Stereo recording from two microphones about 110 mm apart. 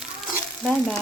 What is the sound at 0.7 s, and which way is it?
Speech, 5° left (ahead or behind).